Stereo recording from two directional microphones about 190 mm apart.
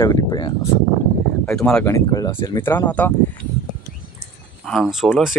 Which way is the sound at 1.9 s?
20° left (ahead or behind).